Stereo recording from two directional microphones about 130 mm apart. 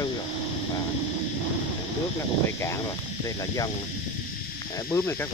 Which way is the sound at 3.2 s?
25° left (ahead or behind).